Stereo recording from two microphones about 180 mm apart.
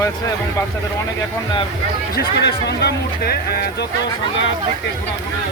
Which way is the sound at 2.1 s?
60° left (ahead or behind).